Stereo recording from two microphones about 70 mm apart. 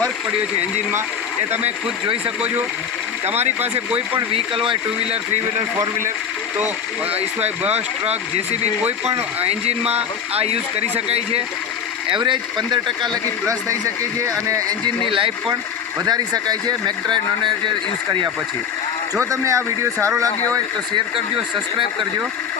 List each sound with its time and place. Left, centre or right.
2.2 s speech: centre
12.2 s speech: right
14.3 s speech: right
16.0 s speech: right
19.2 s speech: right